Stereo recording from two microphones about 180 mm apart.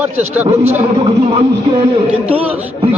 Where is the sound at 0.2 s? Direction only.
35° right (ahead or behind).